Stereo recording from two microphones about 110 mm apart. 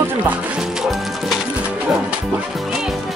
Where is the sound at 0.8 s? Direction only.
Centre (ahead or behind).